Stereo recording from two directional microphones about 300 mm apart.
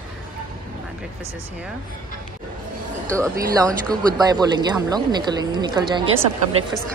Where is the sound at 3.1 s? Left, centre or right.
Centre.